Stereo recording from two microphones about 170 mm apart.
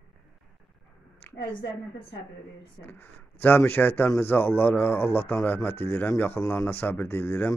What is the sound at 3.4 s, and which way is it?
Speech, 10° left (ahead or behind).